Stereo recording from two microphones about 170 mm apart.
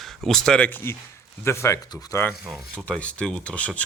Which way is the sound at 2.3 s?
5° left (ahead or behind).